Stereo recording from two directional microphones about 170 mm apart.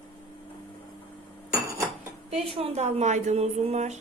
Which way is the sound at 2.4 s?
35° right (ahead or behind).